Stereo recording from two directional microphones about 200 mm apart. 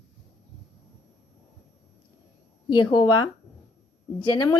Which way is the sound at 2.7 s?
25° left (ahead or behind).